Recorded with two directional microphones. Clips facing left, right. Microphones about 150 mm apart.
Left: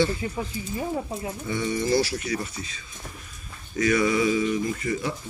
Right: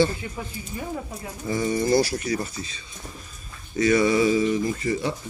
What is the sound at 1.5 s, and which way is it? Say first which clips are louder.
Speech: right 3 dB; 40° right (ahead or behind).